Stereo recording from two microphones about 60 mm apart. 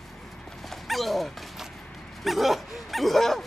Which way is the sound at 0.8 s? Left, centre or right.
Centre.